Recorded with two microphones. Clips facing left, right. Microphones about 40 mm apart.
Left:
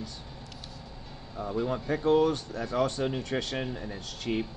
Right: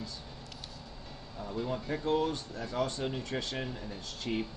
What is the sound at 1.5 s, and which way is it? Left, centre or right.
Speech, left.